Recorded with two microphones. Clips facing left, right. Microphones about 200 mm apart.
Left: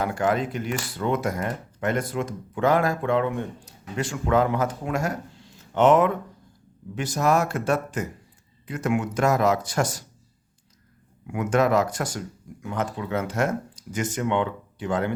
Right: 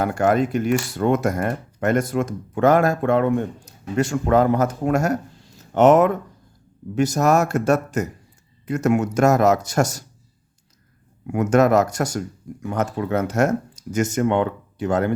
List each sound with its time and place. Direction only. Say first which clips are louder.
0.0 s speech: right 5 dB; 45° right (ahead or behind)
11.3 s speech: right 5 dB; 45° right (ahead or behind)